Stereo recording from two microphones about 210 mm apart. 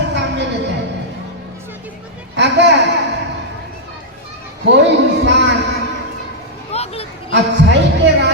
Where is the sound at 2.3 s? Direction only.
55° right (ahead or behind).